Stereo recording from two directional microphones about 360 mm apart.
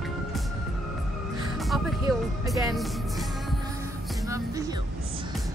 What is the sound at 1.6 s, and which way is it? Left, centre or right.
Music, centre.